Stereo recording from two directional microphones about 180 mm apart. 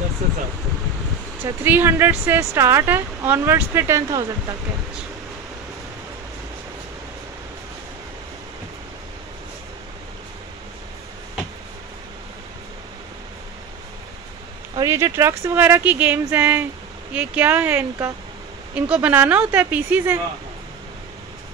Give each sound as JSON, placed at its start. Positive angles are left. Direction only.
{"t": 1.4, "sound": "speech", "side_deg": -10}
{"t": 14.8, "sound": "speech", "side_deg": -20}